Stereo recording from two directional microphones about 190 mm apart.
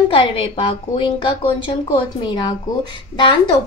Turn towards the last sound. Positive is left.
turn(degrees=25)  # may be behind; listen again after turning